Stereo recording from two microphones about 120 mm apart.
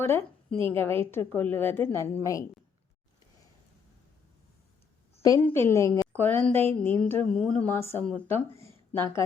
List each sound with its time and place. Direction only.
0.0 s a woman's voice: 20° left (ahead or behind)
5.4 s a woman's voice: 20° left (ahead or behind)